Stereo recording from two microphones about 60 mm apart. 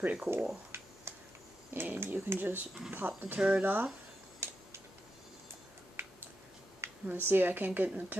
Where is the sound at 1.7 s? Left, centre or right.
Right.